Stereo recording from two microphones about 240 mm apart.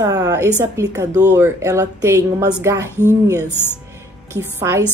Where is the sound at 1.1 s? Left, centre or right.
Right.